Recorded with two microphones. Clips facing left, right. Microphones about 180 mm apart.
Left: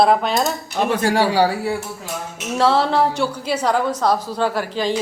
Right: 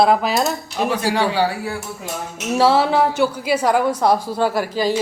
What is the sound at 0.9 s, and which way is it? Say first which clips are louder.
Speech: left 2 dB; 50° left (ahead or behind).